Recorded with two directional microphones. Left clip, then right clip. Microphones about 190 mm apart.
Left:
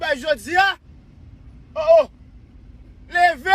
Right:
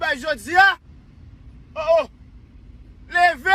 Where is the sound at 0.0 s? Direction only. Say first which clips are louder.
Left 2 dB; 10° left (ahead or behind).